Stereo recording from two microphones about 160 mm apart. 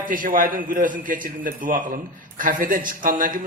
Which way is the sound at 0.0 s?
60° right (ahead or behind).